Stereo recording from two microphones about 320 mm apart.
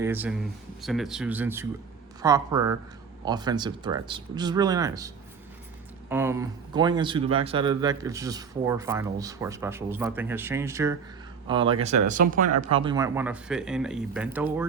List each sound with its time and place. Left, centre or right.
0.0 s speech: centre